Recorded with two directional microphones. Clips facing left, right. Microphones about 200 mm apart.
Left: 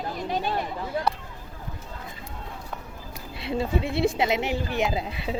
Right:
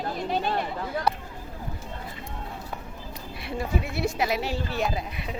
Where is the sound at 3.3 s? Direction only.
25° left (ahead or behind).